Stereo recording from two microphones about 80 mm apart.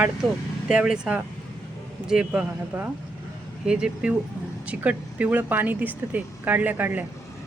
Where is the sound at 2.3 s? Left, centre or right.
Right.